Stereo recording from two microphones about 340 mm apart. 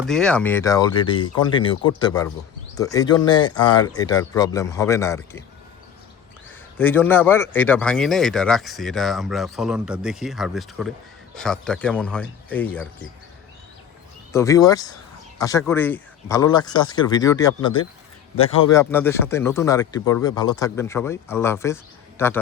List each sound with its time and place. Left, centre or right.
0.1 s speech: centre
6.7 s speech: centre
14.3 s speech: centre